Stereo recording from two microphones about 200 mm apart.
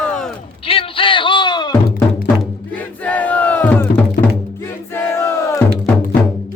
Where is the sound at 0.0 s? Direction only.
5° left (ahead or behind).